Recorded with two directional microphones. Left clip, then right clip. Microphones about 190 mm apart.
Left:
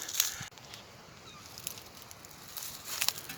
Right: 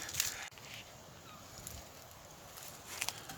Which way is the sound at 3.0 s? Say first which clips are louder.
Left 7 dB; 45° left (ahead or behind).